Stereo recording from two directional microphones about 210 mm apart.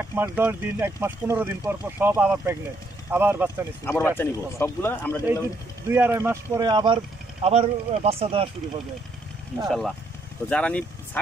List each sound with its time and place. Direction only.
0.0 s speech: 10° right (ahead or behind)
3.8 s speech: 10° left (ahead or behind)
5.9 s speech: 10° right (ahead or behind); by 8.5 s 25° right (ahead or behind)
9.7 s speech: centre (ahead or behind)